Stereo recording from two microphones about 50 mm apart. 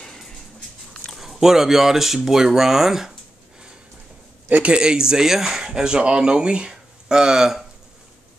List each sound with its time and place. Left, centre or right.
0.0 s dog: centre
0.9 s speech: centre
4.5 s a man's voice: right
4.7 s speech: centre